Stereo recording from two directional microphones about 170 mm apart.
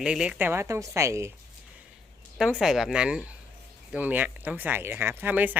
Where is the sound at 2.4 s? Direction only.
Centre (ahead or behind).